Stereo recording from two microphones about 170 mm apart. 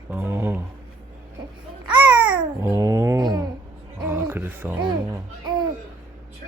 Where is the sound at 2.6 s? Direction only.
15° right (ahead or behind).